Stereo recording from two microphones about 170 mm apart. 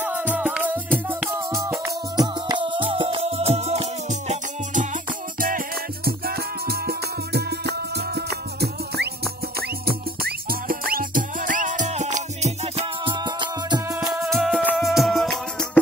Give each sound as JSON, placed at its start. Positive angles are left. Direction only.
{"t": 0.0, "sound": "music", "side_deg": -10}
{"t": 6.0, "sound": "music", "side_deg": -65}
{"t": 9.6, "sound": "music", "side_deg": -65}
{"t": 14.2, "sound": "music", "side_deg": 0}